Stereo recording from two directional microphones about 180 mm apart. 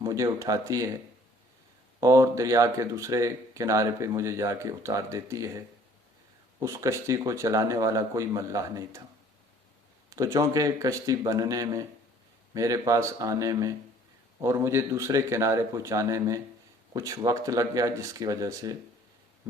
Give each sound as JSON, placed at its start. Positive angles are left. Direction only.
{"t": 0.0, "sound": "speech", "side_deg": -20}
{"t": 2.0, "sound": "speech", "side_deg": -20}
{"t": 10.1, "sound": "speech", "side_deg": -20}